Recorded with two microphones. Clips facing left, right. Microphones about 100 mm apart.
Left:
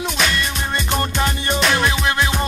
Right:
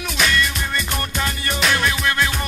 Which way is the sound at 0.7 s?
30° left (ahead or behind).